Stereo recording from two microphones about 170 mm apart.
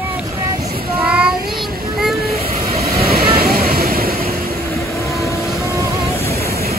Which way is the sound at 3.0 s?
60° right (ahead or behind).